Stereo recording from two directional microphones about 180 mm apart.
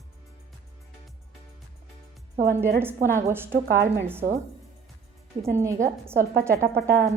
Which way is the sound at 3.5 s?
55° right (ahead or behind).